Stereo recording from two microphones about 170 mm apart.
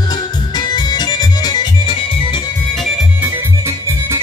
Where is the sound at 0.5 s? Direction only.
25° left (ahead or behind).